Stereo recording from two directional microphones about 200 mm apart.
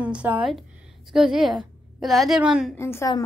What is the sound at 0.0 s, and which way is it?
A woman's voice, 5° right (ahead or behind).